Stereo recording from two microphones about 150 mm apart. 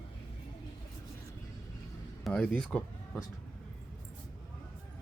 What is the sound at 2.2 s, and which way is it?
Speech, 5° left (ahead or behind).